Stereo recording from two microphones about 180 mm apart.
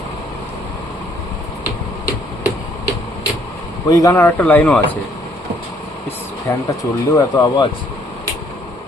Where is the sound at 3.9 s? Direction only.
20° left (ahead or behind).